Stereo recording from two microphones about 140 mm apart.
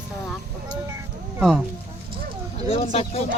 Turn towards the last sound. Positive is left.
turn(degrees=45)  # may be behind; listen again after turning